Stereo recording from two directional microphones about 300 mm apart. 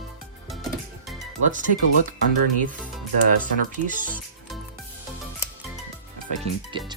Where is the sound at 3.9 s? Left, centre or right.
Right.